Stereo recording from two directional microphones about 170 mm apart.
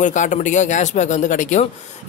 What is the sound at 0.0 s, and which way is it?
A man's voice, 45° left (ahead or behind).